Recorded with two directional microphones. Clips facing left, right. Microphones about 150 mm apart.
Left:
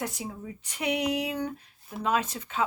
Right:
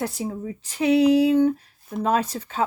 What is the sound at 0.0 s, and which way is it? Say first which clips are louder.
Speech: right 7 dB; 30° right (ahead or behind).